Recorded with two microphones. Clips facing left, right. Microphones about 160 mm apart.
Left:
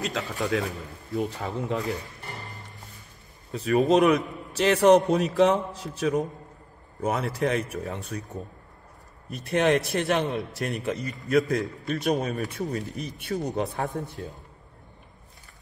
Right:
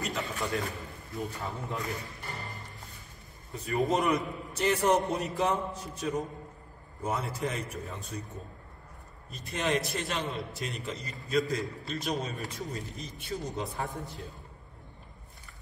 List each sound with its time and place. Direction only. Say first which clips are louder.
0.0 s a man's voice: left 4 dB; 90° left
1.1 s speech: left 8 dB; 75° left (ahead or behind)
3.5 s a man's voice: left 8 dB; 85° left
7.0 s speech: left 6 dB; 75° left (ahead or behind)
9.3 s speech: left 8 dB; 65° left (ahead or behind)